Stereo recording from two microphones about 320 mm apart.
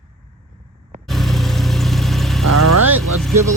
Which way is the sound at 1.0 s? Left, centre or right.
Centre.